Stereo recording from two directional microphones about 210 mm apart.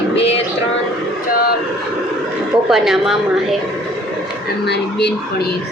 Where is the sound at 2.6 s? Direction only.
Centre (ahead or behind).